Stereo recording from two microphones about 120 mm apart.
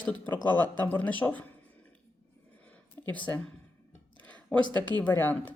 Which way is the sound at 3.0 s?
15° left (ahead or behind).